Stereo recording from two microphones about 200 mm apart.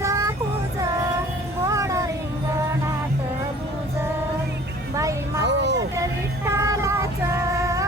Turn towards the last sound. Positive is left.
turn(degrees=-15)  # may be behind; listen again after turning